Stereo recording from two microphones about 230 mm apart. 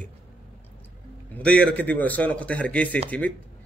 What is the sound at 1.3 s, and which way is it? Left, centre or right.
Speech, centre.